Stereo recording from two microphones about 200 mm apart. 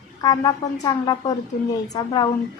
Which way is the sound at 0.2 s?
20° left (ahead or behind).